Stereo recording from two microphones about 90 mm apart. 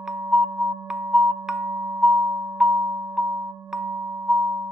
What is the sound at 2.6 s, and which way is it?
Music, 10° right (ahead or behind).